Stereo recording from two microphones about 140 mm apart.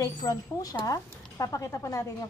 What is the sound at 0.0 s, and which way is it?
A woman's voice, 25° left (ahead or behind).